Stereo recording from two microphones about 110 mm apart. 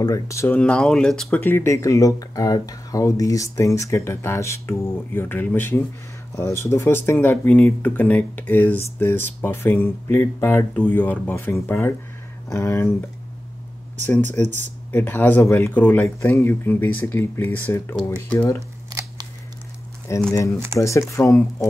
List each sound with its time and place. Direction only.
0.0 s speech: 30° left (ahead or behind)
0.5 s speech: 10° left (ahead or behind)
1.4 s speech: 20° left (ahead or behind)
14.4 s speech: 90° right
14.9 s speech: 15° left (ahead or behind)
18.9 s scissors: 40° right (ahead or behind)
20.1 s speech: 25° left (ahead or behind)